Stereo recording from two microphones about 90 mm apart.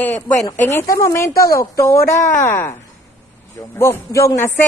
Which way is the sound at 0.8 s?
35° left (ahead or behind).